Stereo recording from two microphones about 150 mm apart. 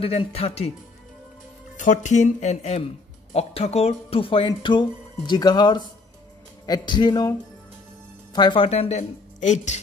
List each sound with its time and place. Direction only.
0.0 s speech: 40° left (ahead or behind)
1.8 s a man's voice: 55° left (ahead or behind)